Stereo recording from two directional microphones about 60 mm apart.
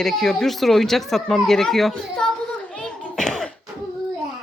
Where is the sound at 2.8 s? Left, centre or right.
Centre.